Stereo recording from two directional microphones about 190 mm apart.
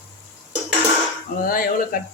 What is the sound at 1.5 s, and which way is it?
Speech, 50° left (ahead or behind).